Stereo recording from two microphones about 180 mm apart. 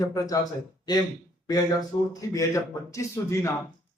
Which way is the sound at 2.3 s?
15° left (ahead or behind).